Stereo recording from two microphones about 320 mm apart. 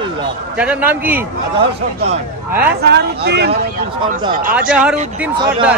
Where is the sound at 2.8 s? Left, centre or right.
Right.